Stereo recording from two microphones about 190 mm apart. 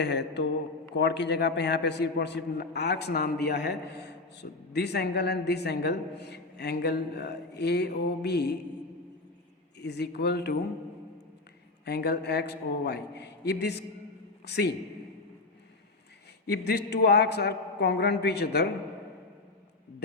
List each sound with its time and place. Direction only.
0.0 s a man's voice: 65° left (ahead or behind)
9.7 s a man's voice: 60° left (ahead or behind)
11.9 s a man's voice: 60° left (ahead or behind)
16.5 s a man's voice: 55° left (ahead or behind)